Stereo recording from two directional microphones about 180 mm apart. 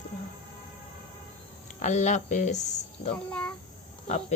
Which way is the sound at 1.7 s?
40° left (ahead or behind).